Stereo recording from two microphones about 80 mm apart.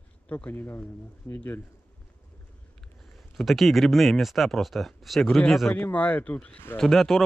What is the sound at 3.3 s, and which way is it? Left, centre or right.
Speech, centre.